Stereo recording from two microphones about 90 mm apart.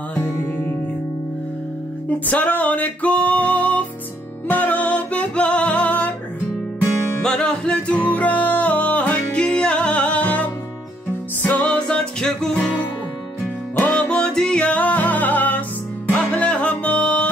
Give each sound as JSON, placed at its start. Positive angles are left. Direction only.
{"t": 2.0, "sound": "music", "side_deg": 15}
{"t": 7.2, "sound": "music", "side_deg": 10}
{"t": 13.7, "sound": "music", "side_deg": 15}